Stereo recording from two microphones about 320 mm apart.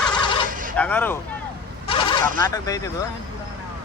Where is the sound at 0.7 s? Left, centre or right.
Centre.